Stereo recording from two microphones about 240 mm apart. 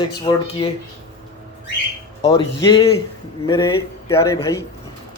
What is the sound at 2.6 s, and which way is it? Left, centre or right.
A man's voice, centre.